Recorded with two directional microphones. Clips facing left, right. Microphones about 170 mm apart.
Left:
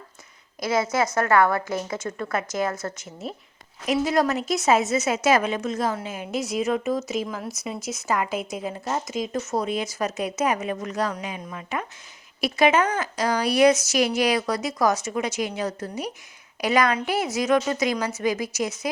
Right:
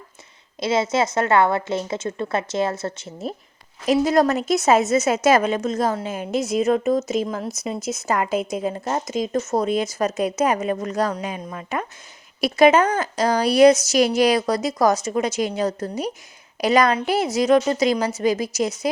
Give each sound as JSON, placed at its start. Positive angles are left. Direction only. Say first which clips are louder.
{"t": 0.6, "sound": "a woman's voice", "louder": "right 3 dB", "side_deg": -25}
{"t": 3.8, "sound": "a woman's voice", "louder": "right 4 dB", "side_deg": -40}